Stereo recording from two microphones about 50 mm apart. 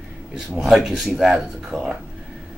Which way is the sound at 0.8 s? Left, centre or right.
Centre.